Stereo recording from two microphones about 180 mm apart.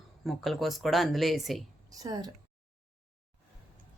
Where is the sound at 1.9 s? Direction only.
20° right (ahead or behind).